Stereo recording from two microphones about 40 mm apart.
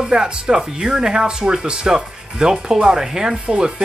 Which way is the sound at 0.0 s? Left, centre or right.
Centre.